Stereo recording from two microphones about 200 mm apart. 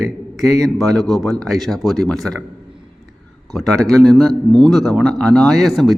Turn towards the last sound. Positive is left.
turn(degrees=0)  # may be behind; listen again after turning